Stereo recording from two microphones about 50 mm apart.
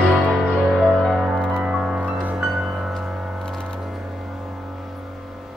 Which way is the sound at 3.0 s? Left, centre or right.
Centre.